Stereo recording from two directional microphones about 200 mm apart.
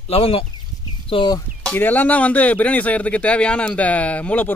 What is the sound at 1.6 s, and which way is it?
A man's voice, 10° left (ahead or behind).